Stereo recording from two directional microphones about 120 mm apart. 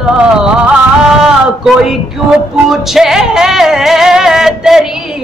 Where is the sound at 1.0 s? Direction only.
5° right (ahead or behind).